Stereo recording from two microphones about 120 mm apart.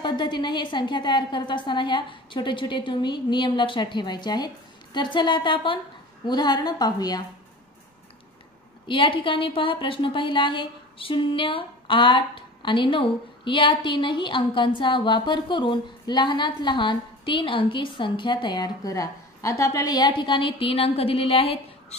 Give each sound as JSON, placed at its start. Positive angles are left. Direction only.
{"t": 0.0, "sound": "a woman's voice", "side_deg": 40}
{"t": 8.8, "sound": "a woman's voice", "side_deg": 45}